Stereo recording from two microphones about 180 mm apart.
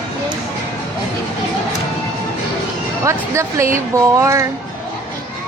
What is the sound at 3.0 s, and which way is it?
Speech, 15° right (ahead or behind).